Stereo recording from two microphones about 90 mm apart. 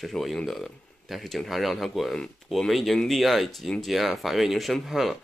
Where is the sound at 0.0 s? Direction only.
Centre (ahead or behind).